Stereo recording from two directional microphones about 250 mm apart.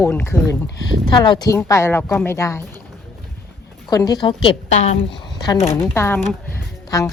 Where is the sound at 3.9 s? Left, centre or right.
Centre.